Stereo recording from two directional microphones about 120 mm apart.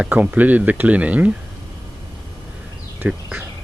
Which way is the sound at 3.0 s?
15° right (ahead or behind).